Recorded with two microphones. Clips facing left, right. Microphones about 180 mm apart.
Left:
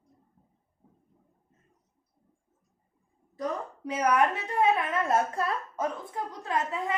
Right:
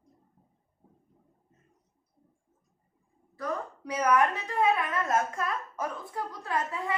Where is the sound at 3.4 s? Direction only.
20° left (ahead or behind).